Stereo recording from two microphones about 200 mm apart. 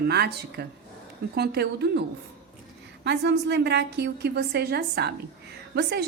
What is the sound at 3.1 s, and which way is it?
A woman's voice, 60° right (ahead or behind).